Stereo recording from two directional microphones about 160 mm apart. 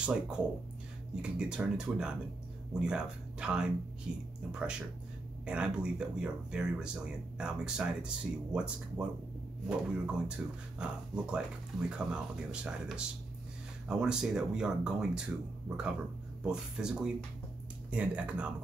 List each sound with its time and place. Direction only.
0.0 s speech: 5° right (ahead or behind)